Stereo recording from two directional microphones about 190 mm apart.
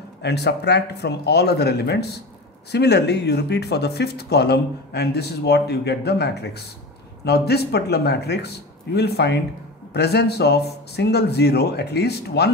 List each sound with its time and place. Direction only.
0.2 s speech: 60° left (ahead or behind)